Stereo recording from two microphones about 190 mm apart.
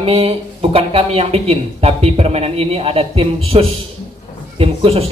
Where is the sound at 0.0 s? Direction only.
30° right (ahead or behind).